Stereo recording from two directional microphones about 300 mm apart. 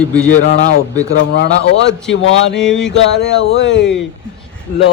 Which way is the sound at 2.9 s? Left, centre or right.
Left.